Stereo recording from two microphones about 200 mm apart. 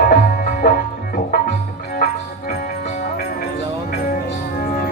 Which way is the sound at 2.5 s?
50° left (ahead or behind).